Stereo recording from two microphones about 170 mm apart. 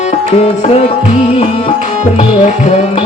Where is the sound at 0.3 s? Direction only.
35° left (ahead or behind).